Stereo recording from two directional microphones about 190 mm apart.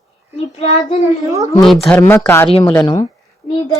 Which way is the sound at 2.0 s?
10° left (ahead or behind).